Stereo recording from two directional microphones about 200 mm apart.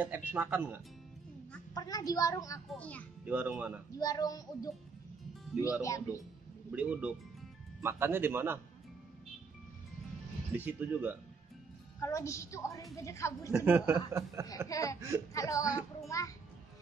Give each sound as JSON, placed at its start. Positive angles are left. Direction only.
{"t": 0.0, "sound": "speech", "side_deg": -10}
{"t": 1.7, "sound": "a woman's voice", "side_deg": 20}
{"t": 2.7, "sound": "a woman's voice", "side_deg": 5}
{"t": 3.3, "sound": "speech", "side_deg": -10}
{"t": 3.9, "sound": "a woman's voice", "side_deg": 20}
{"t": 6.7, "sound": "speech", "side_deg": -5}
{"t": 10.5, "sound": "speech", "side_deg": -10}
{"t": 12.0, "sound": "a woman's voice", "side_deg": 15}
{"t": 13.7, "sound": "speech", "side_deg": -10}
{"t": 14.7, "sound": "a woman's voice", "side_deg": 15}
{"t": 15.0, "sound": "speech", "side_deg": -15}
{"t": 15.3, "sound": "a woman's voice", "side_deg": 15}